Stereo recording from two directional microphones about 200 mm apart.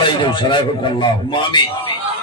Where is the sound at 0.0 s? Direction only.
25° left (ahead or behind).